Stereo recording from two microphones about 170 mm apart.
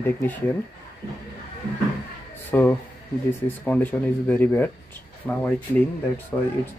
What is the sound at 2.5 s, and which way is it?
Speech, 10° left (ahead or behind).